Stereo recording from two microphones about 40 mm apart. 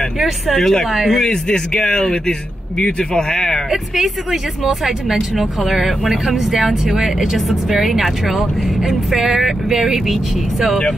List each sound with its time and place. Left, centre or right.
0.6 s speech: centre
0.8 s speech: centre
1.1 s speech: centre
3.7 s speech: centre